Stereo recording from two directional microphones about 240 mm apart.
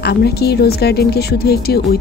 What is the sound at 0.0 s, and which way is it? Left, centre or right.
Speech, left.